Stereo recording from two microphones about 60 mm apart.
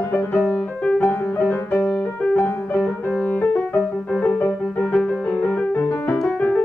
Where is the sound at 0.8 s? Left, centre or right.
Centre.